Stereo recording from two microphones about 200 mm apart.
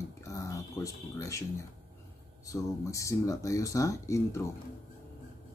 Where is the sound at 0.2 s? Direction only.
15° left (ahead or behind).